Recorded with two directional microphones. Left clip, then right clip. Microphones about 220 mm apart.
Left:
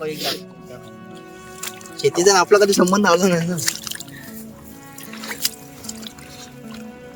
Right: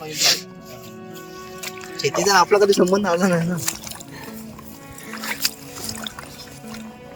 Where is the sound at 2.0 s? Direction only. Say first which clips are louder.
Left 2 dB; 20° left (ahead or behind).